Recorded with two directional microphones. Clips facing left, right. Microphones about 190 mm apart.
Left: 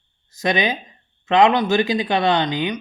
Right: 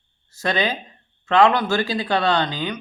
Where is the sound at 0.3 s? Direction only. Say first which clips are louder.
Left 2 dB; 15° left (ahead or behind).